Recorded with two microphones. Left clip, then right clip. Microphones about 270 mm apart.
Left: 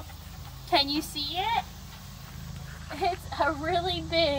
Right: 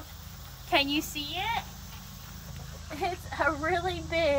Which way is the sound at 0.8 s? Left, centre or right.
Right.